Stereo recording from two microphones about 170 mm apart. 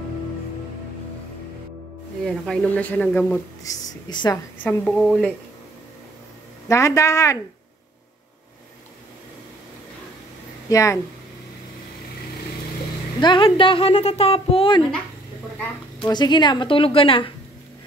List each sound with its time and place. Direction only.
2.2 s speech: 5° left (ahead or behind)
4.1 s a woman's voice: 25° left (ahead or behind)
4.6 s a woman's voice: 5° left (ahead or behind)
6.7 s speech: 15° left (ahead or behind)
10.7 s speech: 20° left (ahead or behind)
13.2 s speech: 30° left (ahead or behind)
16.1 s speech: 25° left (ahead or behind)